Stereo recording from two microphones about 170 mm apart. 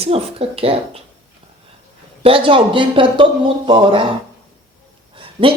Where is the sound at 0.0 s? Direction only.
35° right (ahead or behind).